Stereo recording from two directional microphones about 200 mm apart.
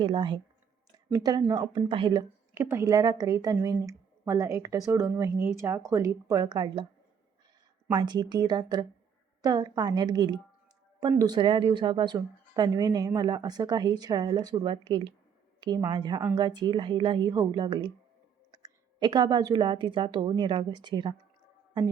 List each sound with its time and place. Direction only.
0.0 s a woman's voice: 25° right (ahead or behind)
7.9 s speech: 20° right (ahead or behind)